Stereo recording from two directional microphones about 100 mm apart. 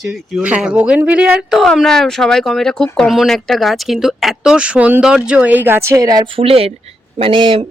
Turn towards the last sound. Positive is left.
turn(degrees=-60)  # may be behind; listen again after turning